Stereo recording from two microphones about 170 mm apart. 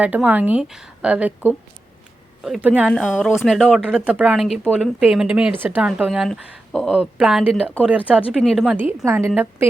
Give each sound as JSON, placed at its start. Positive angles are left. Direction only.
{"t": 0.0, "sound": "a woman's voice", "side_deg": -10}
{"t": 8.8, "sound": "a woman's voice", "side_deg": -10}